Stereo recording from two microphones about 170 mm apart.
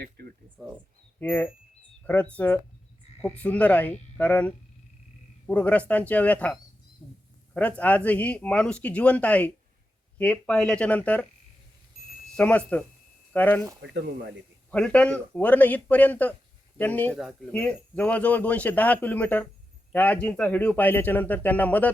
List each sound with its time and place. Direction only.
0.0 s a sound: 70° right (ahead or behind)
0.6 s speech: centre (ahead or behind)
1.2 s a man's voice: 10° left (ahead or behind)
12.4 s a man's voice: 10° left (ahead or behind)
13.8 s speech: 90° right
14.7 s a man's voice: 5° left (ahead or behind)
17.2 s a man's voice: centre (ahead or behind)